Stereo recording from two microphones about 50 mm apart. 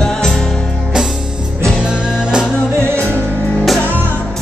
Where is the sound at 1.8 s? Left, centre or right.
Centre.